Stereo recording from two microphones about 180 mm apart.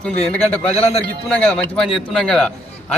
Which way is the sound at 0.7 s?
35° left (ahead or behind).